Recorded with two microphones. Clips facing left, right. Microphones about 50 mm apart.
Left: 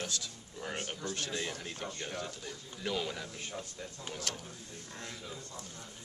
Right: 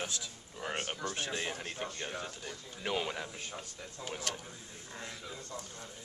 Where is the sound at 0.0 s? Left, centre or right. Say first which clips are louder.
Even; right.